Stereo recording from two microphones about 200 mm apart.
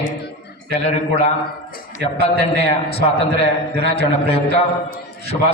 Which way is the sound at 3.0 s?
30° left (ahead or behind).